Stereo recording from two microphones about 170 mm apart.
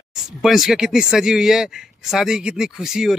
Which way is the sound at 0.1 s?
5° right (ahead or behind).